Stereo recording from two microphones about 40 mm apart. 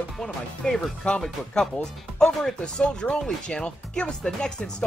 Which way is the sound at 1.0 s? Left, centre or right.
Left.